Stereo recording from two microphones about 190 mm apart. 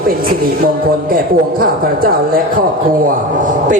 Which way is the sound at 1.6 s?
50° right (ahead or behind).